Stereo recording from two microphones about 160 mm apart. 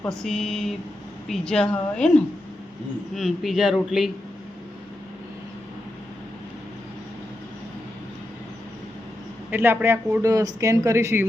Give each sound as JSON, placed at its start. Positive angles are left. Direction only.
{"t": 0.1, "sound": "a man's voice", "side_deg": 5}
{"t": 3.2, "sound": "a man's voice", "side_deg": 0}
{"t": 9.5, "sound": "speech", "side_deg": -15}